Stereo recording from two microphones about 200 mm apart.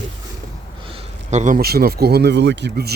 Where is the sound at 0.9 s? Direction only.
30° right (ahead or behind).